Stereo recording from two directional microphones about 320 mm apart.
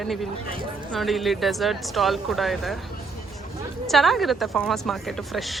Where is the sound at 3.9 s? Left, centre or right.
Centre.